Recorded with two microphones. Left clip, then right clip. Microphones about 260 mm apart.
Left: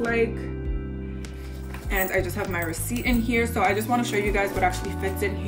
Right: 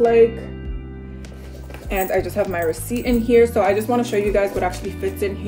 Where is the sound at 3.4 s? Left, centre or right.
Centre.